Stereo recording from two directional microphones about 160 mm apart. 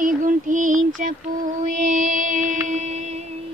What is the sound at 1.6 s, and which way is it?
Music, 50° right (ahead or behind).